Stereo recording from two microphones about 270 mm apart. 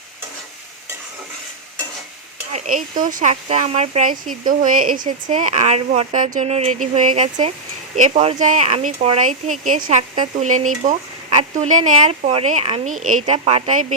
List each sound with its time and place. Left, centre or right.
2.5 s speech: right